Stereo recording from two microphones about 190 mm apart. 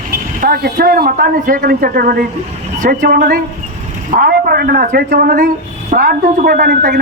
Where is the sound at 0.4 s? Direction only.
55° right (ahead or behind).